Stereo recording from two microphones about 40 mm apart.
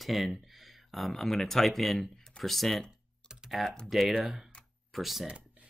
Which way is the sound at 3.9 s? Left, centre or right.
Centre.